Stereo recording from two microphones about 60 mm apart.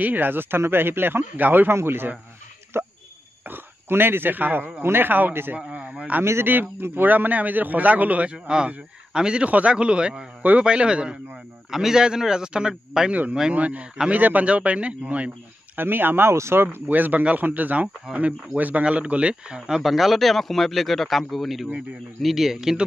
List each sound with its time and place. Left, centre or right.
0.0 s a man's voice: right
1.7 s a man's voice: right
2.7 s a sound: right
3.4 s a man's voice: right
5.6 s a man's voice: centre
13.1 s a man's voice: right
15.8 s a man's voice: right
16.8 s a man's voice: right
19.8 s a man's voice: centre